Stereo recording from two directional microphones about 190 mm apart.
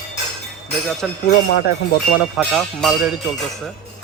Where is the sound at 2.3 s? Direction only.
Centre (ahead or behind).